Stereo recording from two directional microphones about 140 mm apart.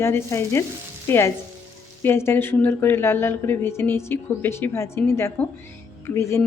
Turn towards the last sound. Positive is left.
turn(degrees=20)  # may be behind; listen again after turning